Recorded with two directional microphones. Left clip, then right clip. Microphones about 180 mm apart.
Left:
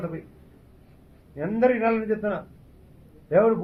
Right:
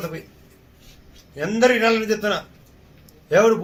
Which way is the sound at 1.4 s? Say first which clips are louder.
Right 5 dB; 30° right (ahead or behind).